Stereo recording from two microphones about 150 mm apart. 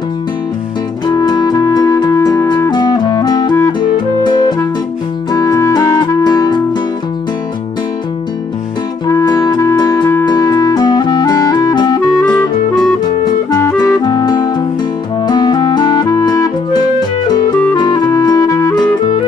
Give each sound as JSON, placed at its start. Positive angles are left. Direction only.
{"t": 1.0, "sound": "music", "side_deg": 25}
{"t": 9.0, "sound": "music", "side_deg": 25}
{"t": 12.2, "sound": "music", "side_deg": 10}
{"t": 13.5, "sound": "music", "side_deg": 20}
{"t": 17.7, "sound": "music", "side_deg": 25}